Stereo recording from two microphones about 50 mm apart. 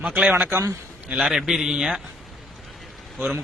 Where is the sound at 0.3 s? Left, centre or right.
Right.